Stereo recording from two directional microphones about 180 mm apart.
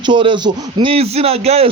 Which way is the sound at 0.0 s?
25° right (ahead or behind).